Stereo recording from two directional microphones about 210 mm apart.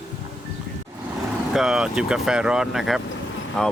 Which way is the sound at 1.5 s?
Centre (ahead or behind).